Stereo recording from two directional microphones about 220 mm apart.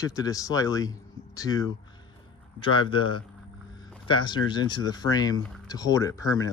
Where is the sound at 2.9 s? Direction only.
20° left (ahead or behind).